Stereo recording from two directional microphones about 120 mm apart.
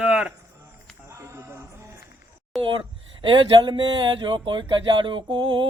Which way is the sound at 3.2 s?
45° right (ahead or behind).